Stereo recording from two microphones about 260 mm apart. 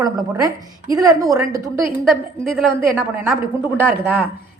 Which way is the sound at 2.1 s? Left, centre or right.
Centre.